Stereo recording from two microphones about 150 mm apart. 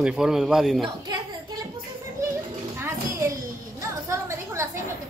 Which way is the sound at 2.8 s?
20° right (ahead or behind).